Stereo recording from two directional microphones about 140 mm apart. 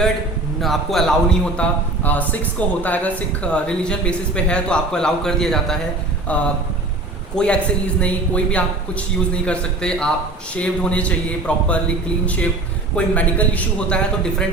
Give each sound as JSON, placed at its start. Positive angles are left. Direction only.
{"t": 0.6, "sound": "a man's voice", "side_deg": 0}